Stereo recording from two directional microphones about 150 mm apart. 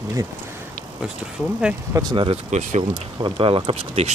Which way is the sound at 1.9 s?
25° right (ahead or behind).